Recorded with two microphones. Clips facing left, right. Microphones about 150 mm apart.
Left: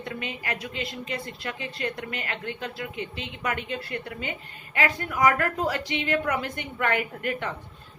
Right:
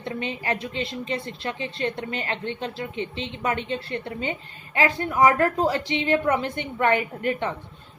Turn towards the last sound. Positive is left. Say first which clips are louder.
# right 4 dB
turn(degrees=-25)  # may be behind; listen again after turning